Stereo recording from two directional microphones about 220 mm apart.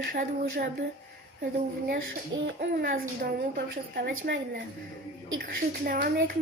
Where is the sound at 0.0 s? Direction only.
40° right (ahead or behind).